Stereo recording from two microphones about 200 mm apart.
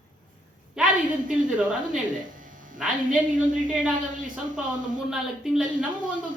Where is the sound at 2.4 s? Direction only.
40° right (ahead or behind).